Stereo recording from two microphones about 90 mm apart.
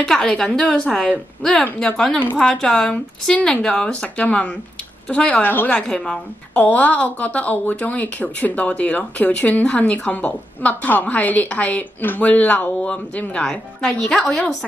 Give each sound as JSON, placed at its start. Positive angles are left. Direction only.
{"t": 0.0, "sound": "a woman's voice", "side_deg": 5}
{"t": 5.8, "sound": "a woman's voice", "side_deg": 10}
{"t": 14.2, "sound": "a woman's voice", "side_deg": 15}